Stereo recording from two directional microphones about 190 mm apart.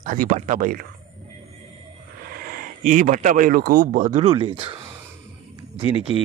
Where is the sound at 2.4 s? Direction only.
45° right (ahead or behind); by 4.8 s 30° right (ahead or behind).